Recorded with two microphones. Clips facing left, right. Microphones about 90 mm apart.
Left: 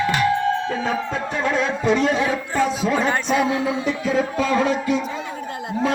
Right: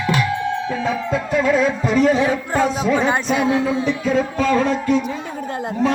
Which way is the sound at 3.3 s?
25° right (ahead or behind).